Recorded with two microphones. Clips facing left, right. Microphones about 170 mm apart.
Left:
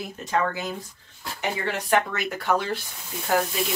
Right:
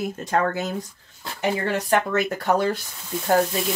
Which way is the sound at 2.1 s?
45° right (ahead or behind).